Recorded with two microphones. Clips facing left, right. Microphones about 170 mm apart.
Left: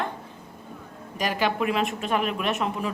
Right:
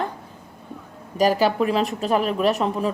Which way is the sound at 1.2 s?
40° right (ahead or behind).